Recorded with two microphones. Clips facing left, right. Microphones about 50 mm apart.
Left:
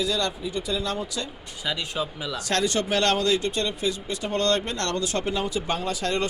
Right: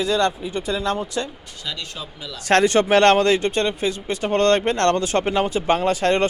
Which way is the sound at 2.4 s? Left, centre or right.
Right.